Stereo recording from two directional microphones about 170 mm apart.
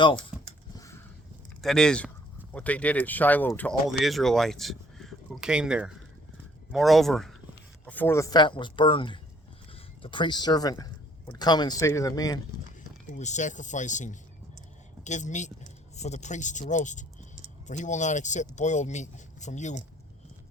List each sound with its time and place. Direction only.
0.3 s a sound: 5° right (ahead or behind)
1.6 s speech: 5° left (ahead or behind)
3.8 s speech: centre (ahead or behind); by 12.4 s 20° left (ahead or behind)
13.1 s speech: 45° left (ahead or behind)